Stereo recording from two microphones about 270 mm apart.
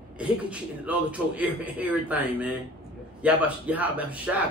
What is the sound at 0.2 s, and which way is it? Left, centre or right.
A man's voice, centre.